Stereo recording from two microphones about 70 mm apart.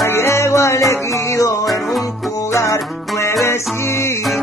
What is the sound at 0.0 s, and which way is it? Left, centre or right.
Music, left.